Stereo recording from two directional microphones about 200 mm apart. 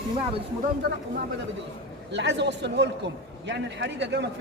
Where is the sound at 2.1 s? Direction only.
60° right (ahead or behind).